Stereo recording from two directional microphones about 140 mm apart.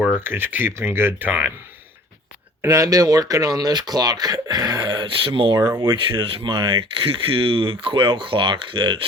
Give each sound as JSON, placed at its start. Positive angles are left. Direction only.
{"t": 0.0, "sound": "speech", "side_deg": -15}
{"t": 2.6, "sound": "speech", "side_deg": -25}
{"t": 5.5, "sound": "speech", "side_deg": -15}
{"t": 5.8, "sound": "speech", "side_deg": -35}